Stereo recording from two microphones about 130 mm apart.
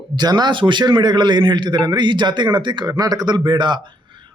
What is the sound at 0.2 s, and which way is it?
A man's voice, 30° right (ahead or behind).